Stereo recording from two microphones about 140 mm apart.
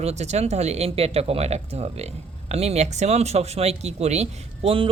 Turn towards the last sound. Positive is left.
turn(degrees=-40)  # may be behind; listen again after turning